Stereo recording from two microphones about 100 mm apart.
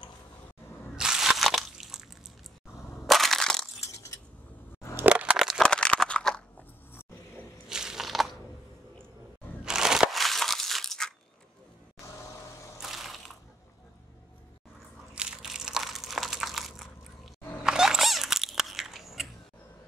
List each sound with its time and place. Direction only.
0.9 s crunch: 5° right (ahead or behind)
3.1 s crushing: centre (ahead or behind)
3.8 s crushing: 30° left (ahead or behind)
4.9 s a sound: 15° right (ahead or behind)
5.6 s crunch: 10° left (ahead or behind)
7.7 s a sound: 5° right (ahead or behind)
9.7 s crushing: 5° right (ahead or behind)
12.8 s ratchet: centre (ahead or behind)
15.1 s crushing: 5° right (ahead or behind)
17.6 s biting: 5° right (ahead or behind)